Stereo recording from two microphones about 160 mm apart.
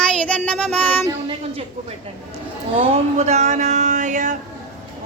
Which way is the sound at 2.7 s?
40° right (ahead or behind).